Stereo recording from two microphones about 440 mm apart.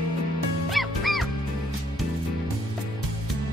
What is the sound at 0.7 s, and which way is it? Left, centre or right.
Music, centre.